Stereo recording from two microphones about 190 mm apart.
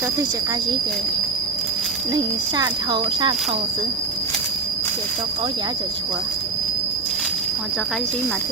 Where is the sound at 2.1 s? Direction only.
20° right (ahead or behind).